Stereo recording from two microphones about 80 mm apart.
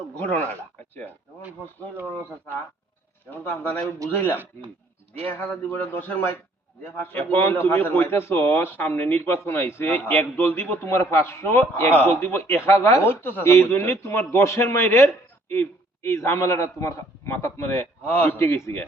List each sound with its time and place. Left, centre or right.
3.2 s a man's voice: left